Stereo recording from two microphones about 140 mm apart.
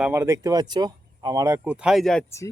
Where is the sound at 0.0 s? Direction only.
20° right (ahead or behind).